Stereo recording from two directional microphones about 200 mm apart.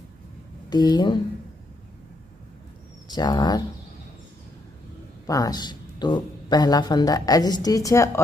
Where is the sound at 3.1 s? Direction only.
20° left (ahead or behind).